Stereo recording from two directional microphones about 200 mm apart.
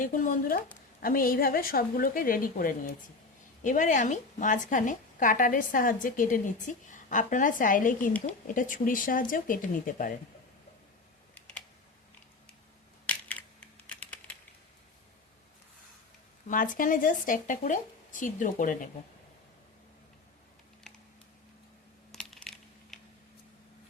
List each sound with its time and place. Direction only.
0.0 s a woman's voice: 40° left (ahead or behind)
11.3 s typing: 5° left (ahead or behind)
13.1 s typing: 5° left (ahead or behind)
16.5 s a woman's voice: 40° left (ahead or behind)
22.1 s typing: 5° left (ahead or behind)